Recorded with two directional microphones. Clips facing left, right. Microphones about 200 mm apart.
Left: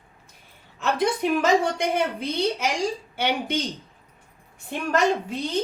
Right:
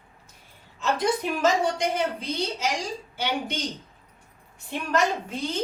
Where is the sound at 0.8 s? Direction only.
60° left (ahead or behind).